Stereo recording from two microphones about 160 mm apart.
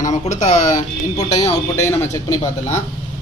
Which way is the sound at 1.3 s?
20° left (ahead or behind).